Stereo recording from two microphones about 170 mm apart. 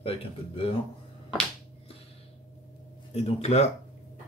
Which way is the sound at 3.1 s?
40° left (ahead or behind).